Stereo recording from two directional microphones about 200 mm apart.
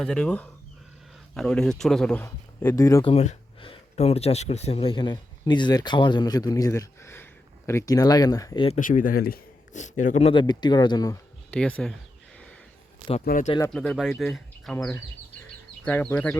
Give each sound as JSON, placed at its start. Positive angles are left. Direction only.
{"t": 0.0, "sound": "speech", "side_deg": 5}
{"t": 3.0, "sound": "speech", "side_deg": 30}
{"t": 8.6, "sound": "speech", "side_deg": 35}
{"t": 10.4, "sound": "speech", "side_deg": 20}
{"t": 11.5, "sound": "speech", "side_deg": 5}
{"t": 13.2, "sound": "speech", "side_deg": 45}
{"t": 13.7, "sound": "speech", "side_deg": 0}